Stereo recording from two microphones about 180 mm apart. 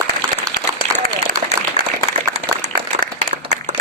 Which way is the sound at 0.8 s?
30° right (ahead or behind).